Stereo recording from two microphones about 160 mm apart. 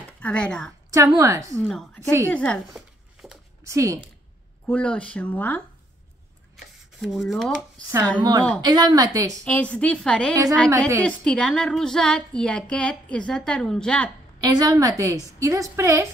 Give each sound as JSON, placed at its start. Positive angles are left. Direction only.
{"t": 0.2, "sound": "speech", "side_deg": 5}
{"t": 0.8, "sound": "a woman's voice", "side_deg": -20}
{"t": 1.6, "sound": "speech", "side_deg": 0}
{"t": 2.0, "sound": "a woman's voice", "side_deg": -20}
{"t": 2.2, "sound": "a sound", "side_deg": 5}
{"t": 3.6, "sound": "a woman's voice", "side_deg": -20}
{"t": 4.6, "sound": "speech", "side_deg": 5}
{"t": 8.2, "sound": "a woman's voice", "side_deg": -25}
{"t": 9.4, "sound": "speech", "side_deg": 5}
{"t": 14.4, "sound": "a woman's voice", "side_deg": -20}